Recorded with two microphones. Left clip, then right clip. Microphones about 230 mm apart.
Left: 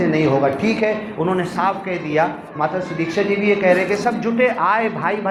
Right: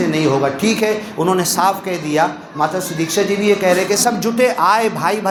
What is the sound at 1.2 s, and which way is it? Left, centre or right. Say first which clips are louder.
A man's voice: right 5 dB; right.